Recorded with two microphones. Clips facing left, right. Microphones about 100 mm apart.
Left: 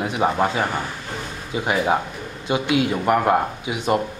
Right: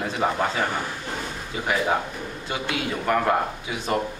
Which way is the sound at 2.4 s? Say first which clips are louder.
Left 9 dB; 20° left (ahead or behind).